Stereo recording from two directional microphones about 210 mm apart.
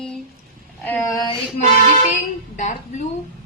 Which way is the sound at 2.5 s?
35° left (ahead or behind).